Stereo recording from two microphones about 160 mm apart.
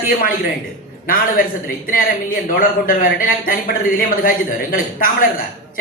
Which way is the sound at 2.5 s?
60° left (ahead or behind).